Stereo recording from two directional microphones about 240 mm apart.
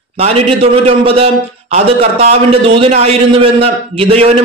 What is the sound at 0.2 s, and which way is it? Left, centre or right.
A man's voice, right.